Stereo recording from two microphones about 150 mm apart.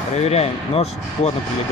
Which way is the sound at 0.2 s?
45° left (ahead or behind).